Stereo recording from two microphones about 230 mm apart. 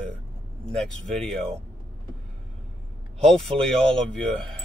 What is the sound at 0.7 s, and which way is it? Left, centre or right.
Speech, centre.